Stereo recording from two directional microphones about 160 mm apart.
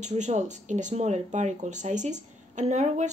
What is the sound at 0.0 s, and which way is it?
Speech, 45° right (ahead or behind).